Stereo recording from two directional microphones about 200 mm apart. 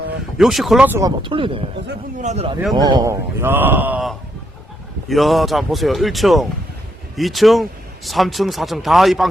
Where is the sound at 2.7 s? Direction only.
20° right (ahead or behind).